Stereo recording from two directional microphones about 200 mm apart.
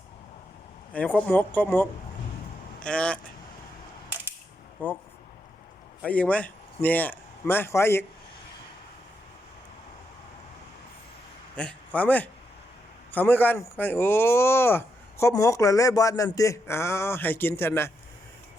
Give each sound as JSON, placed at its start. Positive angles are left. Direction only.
{"t": 0.9, "sound": "speech", "side_deg": 5}
{"t": 4.8, "sound": "speech", "side_deg": 10}
{"t": 6.0, "sound": "a man's voice", "side_deg": 5}
{"t": 11.5, "sound": "a man's voice", "side_deg": 5}